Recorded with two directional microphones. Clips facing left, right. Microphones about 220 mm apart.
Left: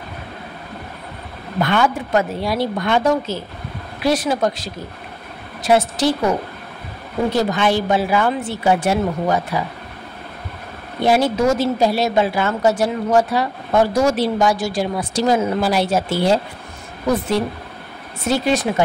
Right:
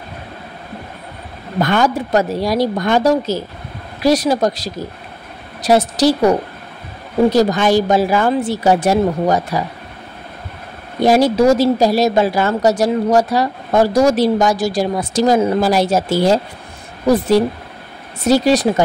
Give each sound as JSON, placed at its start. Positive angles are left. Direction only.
{"t": 1.6, "sound": "a woman's voice", "side_deg": -40}
{"t": 11.0, "sound": "a woman's voice", "side_deg": -40}
{"t": 18.2, "sound": "a woman's voice", "side_deg": -40}